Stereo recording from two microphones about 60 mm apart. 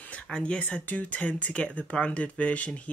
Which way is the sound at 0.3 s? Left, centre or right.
Centre.